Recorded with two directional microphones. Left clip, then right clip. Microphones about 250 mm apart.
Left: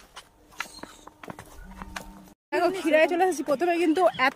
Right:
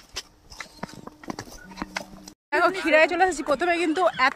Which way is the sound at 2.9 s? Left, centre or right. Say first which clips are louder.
Right 1 dB; centre.